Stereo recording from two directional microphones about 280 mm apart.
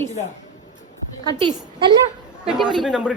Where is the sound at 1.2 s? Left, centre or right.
Centre.